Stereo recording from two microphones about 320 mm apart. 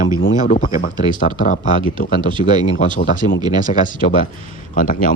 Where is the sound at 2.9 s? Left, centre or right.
Left.